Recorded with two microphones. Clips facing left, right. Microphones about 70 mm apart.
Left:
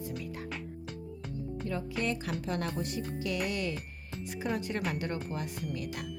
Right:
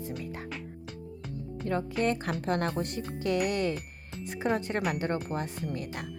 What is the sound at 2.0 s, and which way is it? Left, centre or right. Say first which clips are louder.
A woman's voice: right 4 dB; right.